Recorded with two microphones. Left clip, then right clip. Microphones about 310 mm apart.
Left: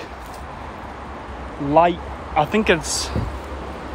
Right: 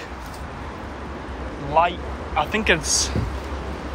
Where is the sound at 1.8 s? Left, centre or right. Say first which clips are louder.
Left 3 dB; left.